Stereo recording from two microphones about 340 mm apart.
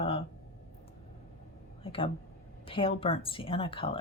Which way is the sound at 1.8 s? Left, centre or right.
Centre.